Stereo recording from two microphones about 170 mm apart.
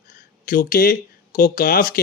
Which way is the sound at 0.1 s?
60° left (ahead or behind).